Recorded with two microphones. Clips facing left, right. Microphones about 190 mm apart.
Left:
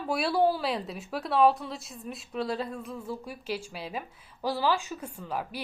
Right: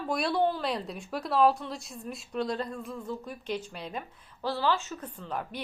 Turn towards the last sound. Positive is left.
turn(degrees=10)  # may be behind; listen again after turning